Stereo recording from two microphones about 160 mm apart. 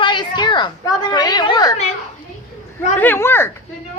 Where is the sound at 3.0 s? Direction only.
15° left (ahead or behind).